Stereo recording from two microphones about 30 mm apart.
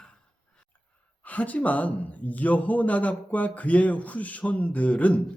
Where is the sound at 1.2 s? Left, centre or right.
Left.